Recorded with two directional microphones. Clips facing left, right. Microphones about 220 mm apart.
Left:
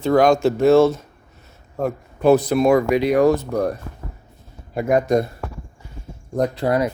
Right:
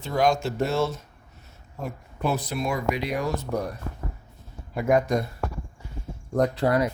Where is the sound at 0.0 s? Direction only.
60° left (ahead or behind).